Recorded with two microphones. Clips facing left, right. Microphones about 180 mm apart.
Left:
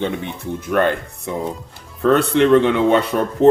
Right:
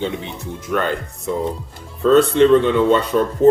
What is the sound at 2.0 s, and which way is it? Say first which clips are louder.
Speech: right 2 dB; 65° left (ahead or behind).